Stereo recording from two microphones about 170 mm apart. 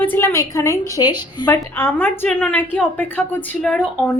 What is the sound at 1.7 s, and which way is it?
A woman's voice, 10° left (ahead or behind).